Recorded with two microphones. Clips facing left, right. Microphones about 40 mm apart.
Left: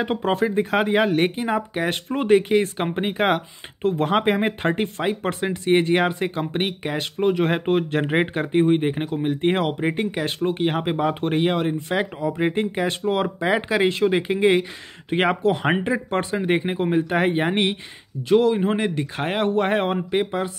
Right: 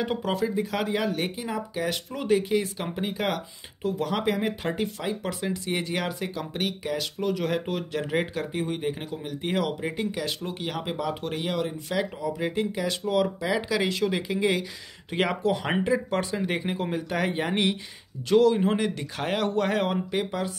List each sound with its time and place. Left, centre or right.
0.0 s speech: left
18.3 s a man's voice: left